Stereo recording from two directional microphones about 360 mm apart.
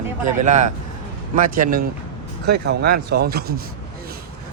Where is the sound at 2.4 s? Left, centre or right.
Right.